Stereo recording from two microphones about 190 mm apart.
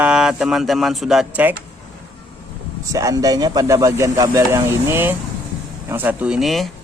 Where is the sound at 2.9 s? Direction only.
20° right (ahead or behind).